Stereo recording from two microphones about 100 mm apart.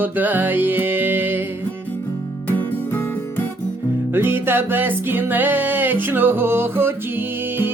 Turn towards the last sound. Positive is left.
turn(degrees=-20)  # may be behind; listen again after turning